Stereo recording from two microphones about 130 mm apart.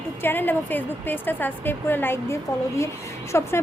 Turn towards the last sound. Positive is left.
turn(degrees=20)  # may be behind; listen again after turning